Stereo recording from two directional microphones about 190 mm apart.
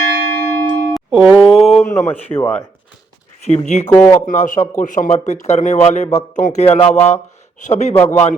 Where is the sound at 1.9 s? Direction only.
10° left (ahead or behind).